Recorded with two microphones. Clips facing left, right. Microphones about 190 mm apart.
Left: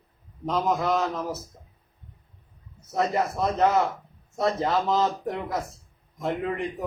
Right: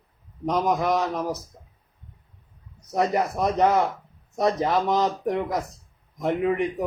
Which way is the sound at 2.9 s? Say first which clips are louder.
Right 2 dB; 15° right (ahead or behind).